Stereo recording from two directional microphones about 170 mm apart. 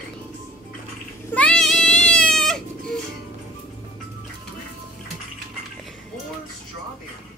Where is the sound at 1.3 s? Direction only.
5° left (ahead or behind).